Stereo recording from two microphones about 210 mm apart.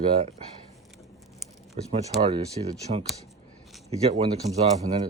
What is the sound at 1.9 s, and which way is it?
Speech, 30° right (ahead or behind).